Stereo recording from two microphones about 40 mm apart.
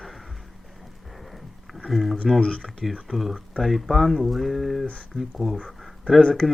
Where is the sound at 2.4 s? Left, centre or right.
Left.